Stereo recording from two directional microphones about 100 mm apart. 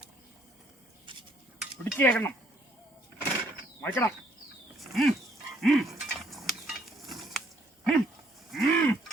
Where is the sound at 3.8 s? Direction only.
25° left (ahead or behind).